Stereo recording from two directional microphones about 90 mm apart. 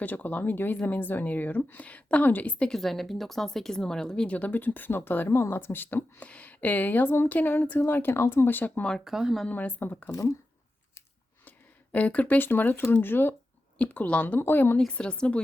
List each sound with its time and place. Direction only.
0.0 s speech: 20° left (ahead or behind)
9.0 s speech: 5° right (ahead or behind)
9.5 s speech: 20° left (ahead or behind)
10.1 s speech: 35° left (ahead or behind)
11.4 s speech: 15° left (ahead or behind)
14.8 s a woman's voice: 10° left (ahead or behind)